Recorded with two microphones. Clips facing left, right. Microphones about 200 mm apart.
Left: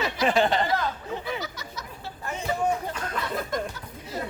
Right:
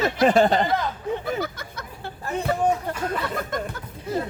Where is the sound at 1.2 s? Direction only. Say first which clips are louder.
Right 5 dB; 55° right (ahead or behind).